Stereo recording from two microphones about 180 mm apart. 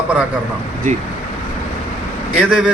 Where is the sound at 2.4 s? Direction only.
5° right (ahead or behind).